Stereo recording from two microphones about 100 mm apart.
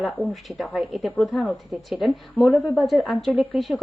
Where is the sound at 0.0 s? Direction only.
Centre (ahead or behind).